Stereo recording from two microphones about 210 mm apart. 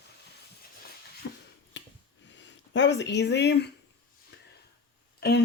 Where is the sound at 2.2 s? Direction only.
60° left (ahead or behind).